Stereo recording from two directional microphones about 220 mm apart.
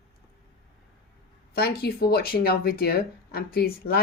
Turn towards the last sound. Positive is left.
turn(degrees=45)  # may be behind; listen again after turning